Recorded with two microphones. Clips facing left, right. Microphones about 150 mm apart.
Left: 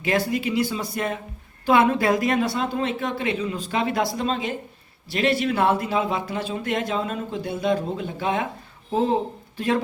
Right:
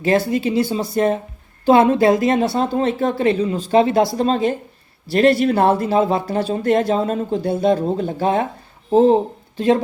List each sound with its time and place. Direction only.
0.0 s a man's voice: 30° right (ahead or behind)